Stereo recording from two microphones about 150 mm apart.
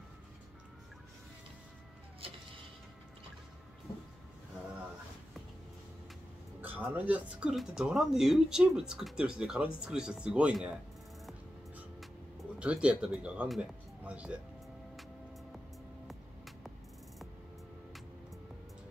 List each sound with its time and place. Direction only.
6.6 s speech: 15° right (ahead or behind)
12.5 s speech: 5° right (ahead or behind)
16.1 s music: centre (ahead or behind)